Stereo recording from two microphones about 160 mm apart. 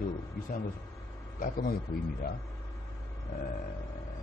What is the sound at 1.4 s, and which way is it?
Speech, 60° left (ahead or behind).